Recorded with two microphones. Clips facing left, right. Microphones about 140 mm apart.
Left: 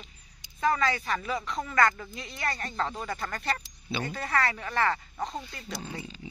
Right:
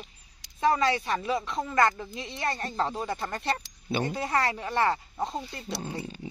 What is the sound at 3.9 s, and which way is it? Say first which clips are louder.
Speech: right 5 dB; 45° right (ahead or behind).